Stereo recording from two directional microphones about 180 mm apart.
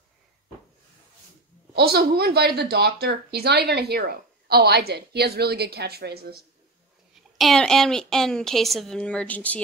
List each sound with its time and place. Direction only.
1.7 s a woman's voice: 60° right (ahead or behind)
7.3 s a woman's voice: centre (ahead or behind)